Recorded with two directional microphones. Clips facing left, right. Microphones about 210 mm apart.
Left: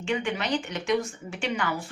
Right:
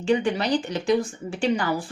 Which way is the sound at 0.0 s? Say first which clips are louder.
Right 6 dB; 35° right (ahead or behind).